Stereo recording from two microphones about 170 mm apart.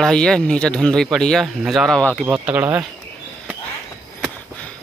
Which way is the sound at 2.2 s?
10° right (ahead or behind).